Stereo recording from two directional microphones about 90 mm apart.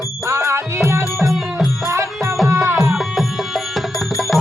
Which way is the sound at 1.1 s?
Centre (ahead or behind).